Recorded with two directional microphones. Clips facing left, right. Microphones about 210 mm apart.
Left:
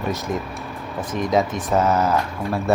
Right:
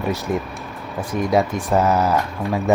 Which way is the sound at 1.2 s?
10° right (ahead or behind).